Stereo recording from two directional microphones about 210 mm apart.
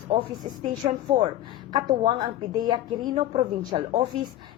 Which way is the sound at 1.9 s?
20° right (ahead or behind).